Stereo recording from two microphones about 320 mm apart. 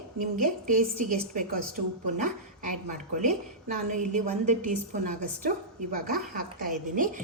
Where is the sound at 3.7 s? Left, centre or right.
Right.